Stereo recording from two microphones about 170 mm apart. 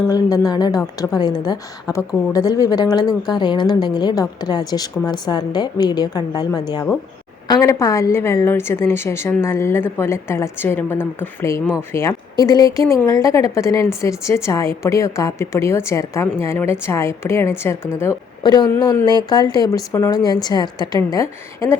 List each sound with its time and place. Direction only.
0.1 s a woman's voice: 20° left (ahead or behind)